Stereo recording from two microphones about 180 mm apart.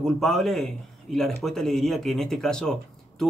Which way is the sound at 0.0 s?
Centre (ahead or behind).